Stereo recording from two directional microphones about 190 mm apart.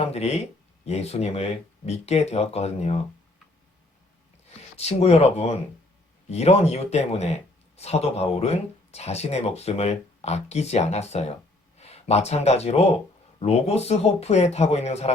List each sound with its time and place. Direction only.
0.0 s speech: 35° left (ahead or behind)
4.8 s speech: 35° left (ahead or behind)